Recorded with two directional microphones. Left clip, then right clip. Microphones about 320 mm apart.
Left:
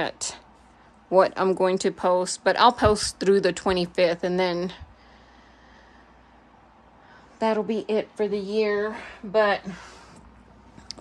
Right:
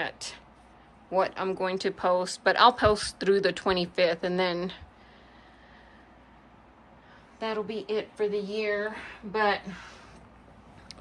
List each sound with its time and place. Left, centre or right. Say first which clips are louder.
0.0 s speech: left 5 dB; centre
7.3 s speech: left 8 dB; left
10.9 s a sound: left 8 dB; centre